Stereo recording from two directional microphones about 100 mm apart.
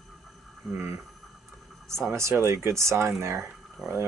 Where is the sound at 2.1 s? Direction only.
30° right (ahead or behind).